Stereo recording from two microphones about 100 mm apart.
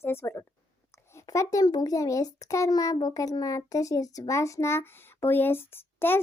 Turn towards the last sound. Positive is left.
turn(degrees=20)  # may be behind; listen again after turning